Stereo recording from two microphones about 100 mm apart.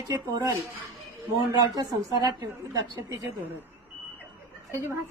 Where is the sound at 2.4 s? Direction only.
40° right (ahead or behind).